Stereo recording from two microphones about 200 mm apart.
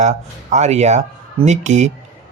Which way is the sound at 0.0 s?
35° right (ahead or behind).